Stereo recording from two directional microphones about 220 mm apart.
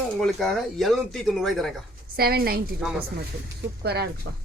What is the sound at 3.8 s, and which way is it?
Speech, 45° right (ahead or behind).